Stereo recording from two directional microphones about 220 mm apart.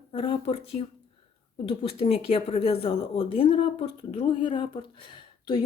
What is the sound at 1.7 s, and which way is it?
A woman's voice, 25° left (ahead or behind).